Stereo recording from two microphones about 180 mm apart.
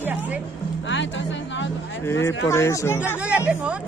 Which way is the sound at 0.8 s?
90° left.